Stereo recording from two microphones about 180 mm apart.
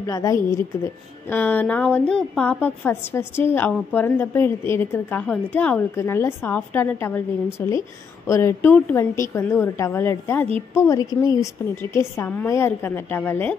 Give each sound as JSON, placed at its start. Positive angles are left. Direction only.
{"t": 0.0, "sound": "a woman's voice", "side_deg": 20}